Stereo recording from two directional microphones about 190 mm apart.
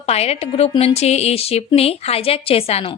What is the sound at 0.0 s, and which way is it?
A woman's voice, 35° left (ahead or behind).